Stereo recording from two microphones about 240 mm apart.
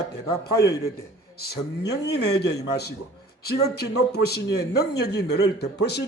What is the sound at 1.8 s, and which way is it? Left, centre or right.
Speech, left.